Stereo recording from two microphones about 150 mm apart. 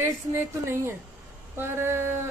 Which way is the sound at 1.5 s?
15° right (ahead or behind).